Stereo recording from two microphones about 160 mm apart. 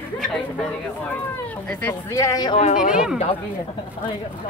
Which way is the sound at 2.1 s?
20° left (ahead or behind).